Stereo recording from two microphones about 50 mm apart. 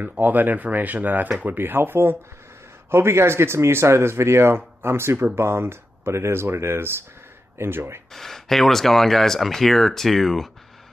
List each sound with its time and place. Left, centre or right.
0.0 s speech: right
8.1 s speech: centre